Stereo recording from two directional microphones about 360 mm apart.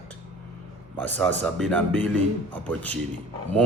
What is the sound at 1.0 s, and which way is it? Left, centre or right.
Speech, centre.